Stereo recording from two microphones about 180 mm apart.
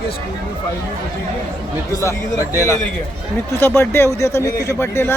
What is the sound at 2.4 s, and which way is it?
Speech, 10° right (ahead or behind).